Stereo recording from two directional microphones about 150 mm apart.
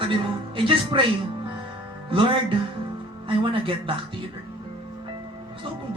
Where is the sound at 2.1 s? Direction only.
35° right (ahead or behind).